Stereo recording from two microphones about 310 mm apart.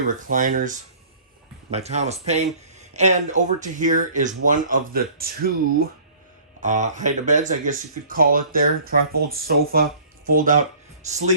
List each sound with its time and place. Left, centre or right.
0.3 s speech: right